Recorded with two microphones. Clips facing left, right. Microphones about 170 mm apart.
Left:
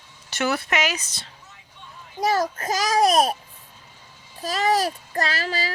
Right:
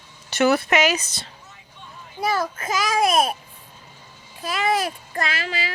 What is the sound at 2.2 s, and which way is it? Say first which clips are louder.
A child's voice: left 2 dB; 40° left (ahead or behind).